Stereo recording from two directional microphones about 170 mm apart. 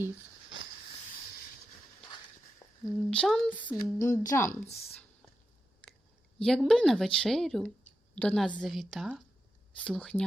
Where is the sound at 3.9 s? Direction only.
15° left (ahead or behind).